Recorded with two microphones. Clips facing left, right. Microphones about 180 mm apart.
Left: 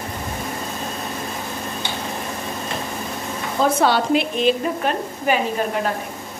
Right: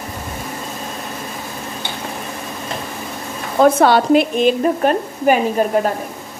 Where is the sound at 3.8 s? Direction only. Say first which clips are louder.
Right 5 dB; 50° right (ahead or behind).